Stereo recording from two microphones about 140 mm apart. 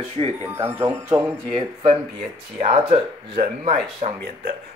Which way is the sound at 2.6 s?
50° right (ahead or behind).